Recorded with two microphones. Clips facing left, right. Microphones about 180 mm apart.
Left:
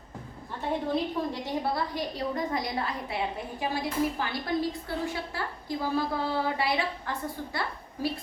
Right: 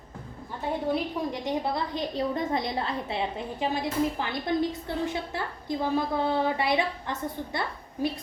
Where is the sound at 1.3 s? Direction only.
20° right (ahead or behind).